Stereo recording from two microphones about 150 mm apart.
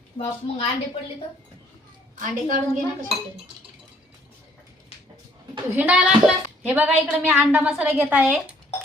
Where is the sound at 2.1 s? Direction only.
60° right (ahead or behind).